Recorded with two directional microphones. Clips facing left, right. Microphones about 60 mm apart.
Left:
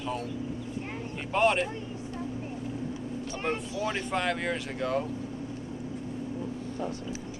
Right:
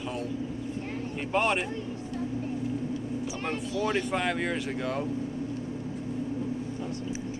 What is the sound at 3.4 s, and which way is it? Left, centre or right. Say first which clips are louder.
Speech: left 1 dB; centre.